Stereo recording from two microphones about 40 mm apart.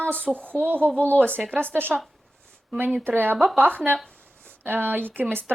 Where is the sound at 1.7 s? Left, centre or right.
Right.